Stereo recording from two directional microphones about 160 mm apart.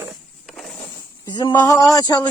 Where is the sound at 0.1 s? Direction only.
Centre (ahead or behind).